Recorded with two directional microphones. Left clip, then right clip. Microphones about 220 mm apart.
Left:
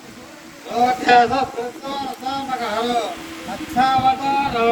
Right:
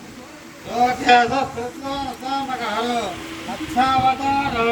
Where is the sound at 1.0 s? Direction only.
25° left (ahead or behind).